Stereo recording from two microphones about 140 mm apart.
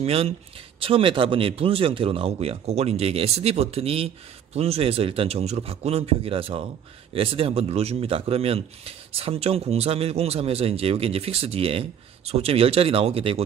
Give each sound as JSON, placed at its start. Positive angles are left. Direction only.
{"t": 0.0, "sound": "speech", "side_deg": -45}